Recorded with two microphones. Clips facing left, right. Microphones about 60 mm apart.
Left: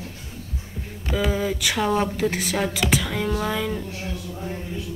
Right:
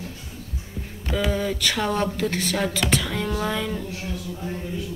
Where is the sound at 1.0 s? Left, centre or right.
Centre.